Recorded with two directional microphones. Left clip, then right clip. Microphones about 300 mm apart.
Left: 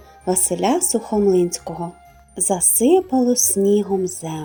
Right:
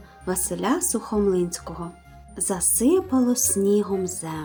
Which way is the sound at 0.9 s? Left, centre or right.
Centre.